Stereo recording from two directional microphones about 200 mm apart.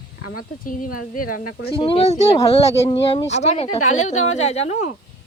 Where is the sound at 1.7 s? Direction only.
25° left (ahead or behind).